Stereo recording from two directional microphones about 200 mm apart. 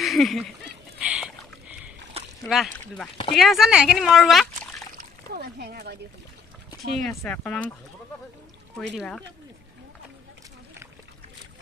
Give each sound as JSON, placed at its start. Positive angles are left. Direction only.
{"t": 0.0, "sound": "speech", "side_deg": 0}
{"t": 0.9, "sound": "rowboat", "side_deg": -5}
{"t": 2.1, "sound": "splash", "side_deg": -30}
{"t": 2.5, "sound": "speech", "side_deg": 0}
{"t": 4.9, "sound": "speech", "side_deg": -50}
{"t": 7.0, "sound": "speech", "side_deg": 5}
{"t": 8.7, "sound": "speech", "side_deg": 5}